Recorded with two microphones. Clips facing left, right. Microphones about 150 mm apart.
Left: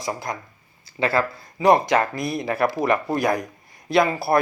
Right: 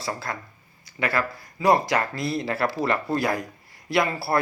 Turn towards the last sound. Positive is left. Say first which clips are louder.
# left 4 dB
turn(degrees=20)  # may be behind; listen again after turning